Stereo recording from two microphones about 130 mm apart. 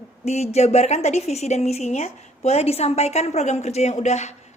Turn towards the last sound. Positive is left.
turn(degrees=60)  # may be behind; listen again after turning